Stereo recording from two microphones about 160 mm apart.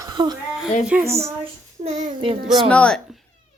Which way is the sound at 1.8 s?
50° right (ahead or behind).